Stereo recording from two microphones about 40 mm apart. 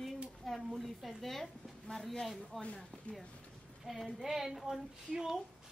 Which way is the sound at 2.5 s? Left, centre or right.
Centre.